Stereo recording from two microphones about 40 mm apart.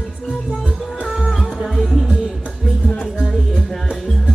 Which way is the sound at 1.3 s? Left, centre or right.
Centre.